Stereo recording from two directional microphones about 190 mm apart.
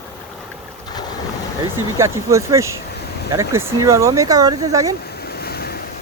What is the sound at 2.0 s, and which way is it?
Speech, 15° right (ahead or behind).